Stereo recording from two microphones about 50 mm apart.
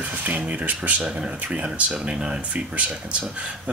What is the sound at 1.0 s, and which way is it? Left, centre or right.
Speech, right.